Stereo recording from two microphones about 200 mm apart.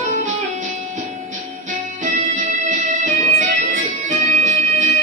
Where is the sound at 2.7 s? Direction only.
40° right (ahead or behind).